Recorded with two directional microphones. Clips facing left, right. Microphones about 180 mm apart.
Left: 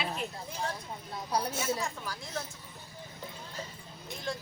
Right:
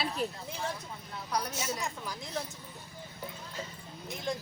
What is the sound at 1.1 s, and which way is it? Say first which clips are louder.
Speech: left 2 dB; 30° left (ahead or behind).